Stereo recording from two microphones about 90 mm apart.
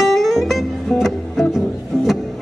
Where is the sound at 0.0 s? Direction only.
Centre (ahead or behind).